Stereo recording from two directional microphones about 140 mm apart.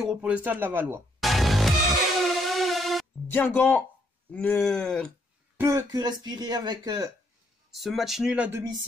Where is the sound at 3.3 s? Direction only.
10° left (ahead or behind).